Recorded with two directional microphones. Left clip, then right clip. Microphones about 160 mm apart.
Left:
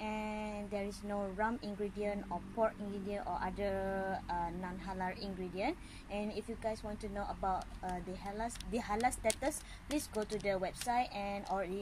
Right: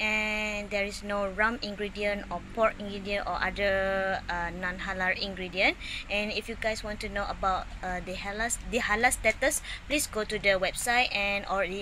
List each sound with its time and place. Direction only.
0.0 s a sound: centre (ahead or behind)
1.4 s speech: centre (ahead or behind)
4.3 s mantra: 10° right (ahead or behind)
4.9 s speech: 5° right (ahead or behind)
7.2 s speech: 20° right (ahead or behind)
7.8 s speech: centre (ahead or behind)